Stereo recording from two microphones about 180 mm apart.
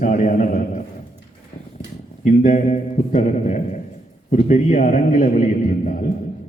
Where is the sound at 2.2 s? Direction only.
45° left (ahead or behind).